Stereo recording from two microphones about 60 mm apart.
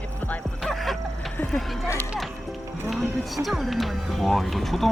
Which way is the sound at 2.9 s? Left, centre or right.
Centre.